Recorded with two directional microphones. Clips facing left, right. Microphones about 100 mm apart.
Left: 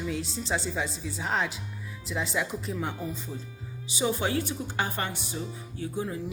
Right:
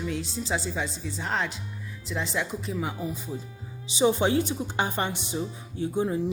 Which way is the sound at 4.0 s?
25° right (ahead or behind).